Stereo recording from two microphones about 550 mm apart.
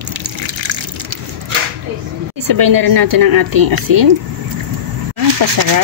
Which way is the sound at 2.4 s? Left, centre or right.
Right.